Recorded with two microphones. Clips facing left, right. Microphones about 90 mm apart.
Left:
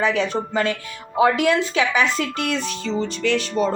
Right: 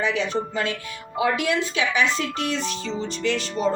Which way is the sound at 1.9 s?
45° left (ahead or behind).